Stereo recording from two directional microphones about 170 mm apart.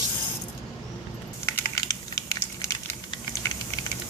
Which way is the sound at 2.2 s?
15° left (ahead or behind).